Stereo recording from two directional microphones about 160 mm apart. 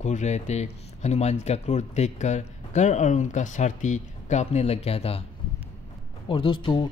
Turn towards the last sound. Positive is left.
turn(degrees=30)  # may be behind; listen again after turning